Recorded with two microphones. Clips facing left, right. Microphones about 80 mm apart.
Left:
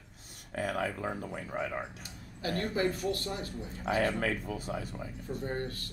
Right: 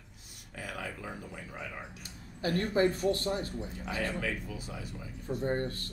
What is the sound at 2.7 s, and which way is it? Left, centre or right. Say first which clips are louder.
Speech: right 5 dB; right.